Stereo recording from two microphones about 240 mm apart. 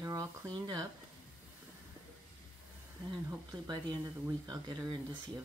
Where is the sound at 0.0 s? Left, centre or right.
Centre.